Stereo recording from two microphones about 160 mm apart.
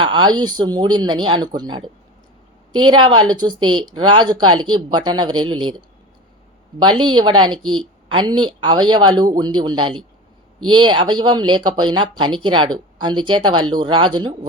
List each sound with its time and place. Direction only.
0.0 s speech: 30° right (ahead or behind)
7.0 s speech: 30° right (ahead or behind)